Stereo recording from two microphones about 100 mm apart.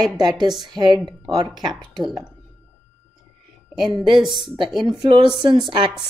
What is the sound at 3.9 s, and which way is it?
A woman's voice, 50° right (ahead or behind).